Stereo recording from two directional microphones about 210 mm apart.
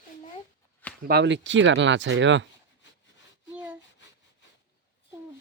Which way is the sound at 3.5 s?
10° right (ahead or behind).